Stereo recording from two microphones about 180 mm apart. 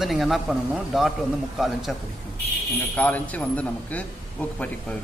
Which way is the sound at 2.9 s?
10° left (ahead or behind).